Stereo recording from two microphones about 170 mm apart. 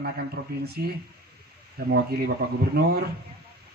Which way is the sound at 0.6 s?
65° right (ahead or behind).